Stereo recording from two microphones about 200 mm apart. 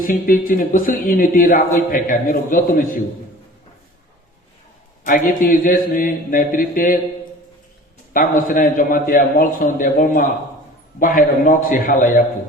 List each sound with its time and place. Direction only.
0.0 s speech: 45° left (ahead or behind)
5.0 s speech: 45° left (ahead or behind)
8.1 s speech: 45° left (ahead or behind)